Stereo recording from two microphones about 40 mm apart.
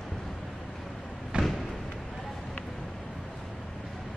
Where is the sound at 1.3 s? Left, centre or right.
Right.